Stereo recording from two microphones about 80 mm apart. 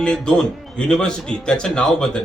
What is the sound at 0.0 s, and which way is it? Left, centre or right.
A man's voice, centre.